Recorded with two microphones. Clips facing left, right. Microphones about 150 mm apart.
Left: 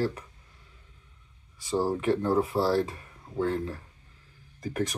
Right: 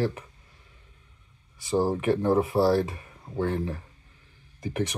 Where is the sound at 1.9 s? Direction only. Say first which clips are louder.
Right 1 dB; 25° right (ahead or behind).